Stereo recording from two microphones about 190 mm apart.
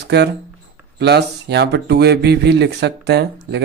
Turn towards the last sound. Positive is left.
turn(degrees=-60)  # may be behind; listen again after turning